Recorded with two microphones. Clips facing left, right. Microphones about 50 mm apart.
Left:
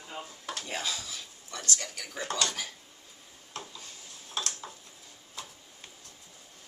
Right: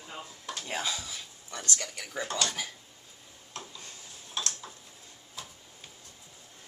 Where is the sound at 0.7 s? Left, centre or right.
Centre.